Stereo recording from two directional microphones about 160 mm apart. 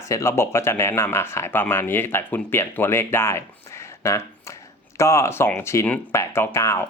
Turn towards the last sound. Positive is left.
turn(degrees=15)  # may be behind; listen again after turning